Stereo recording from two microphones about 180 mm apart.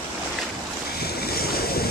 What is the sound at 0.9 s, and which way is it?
Waves, 60° left (ahead or behind).